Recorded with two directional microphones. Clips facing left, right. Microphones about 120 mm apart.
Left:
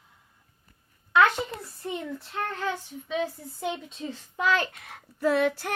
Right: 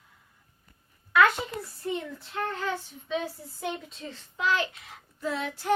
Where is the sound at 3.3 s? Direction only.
Centre (ahead or behind).